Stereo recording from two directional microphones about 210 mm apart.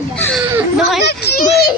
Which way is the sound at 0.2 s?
5° left (ahead or behind).